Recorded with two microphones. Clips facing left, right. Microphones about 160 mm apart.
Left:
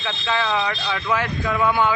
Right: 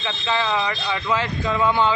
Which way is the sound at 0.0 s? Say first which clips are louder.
Even; 15° right (ahead or behind).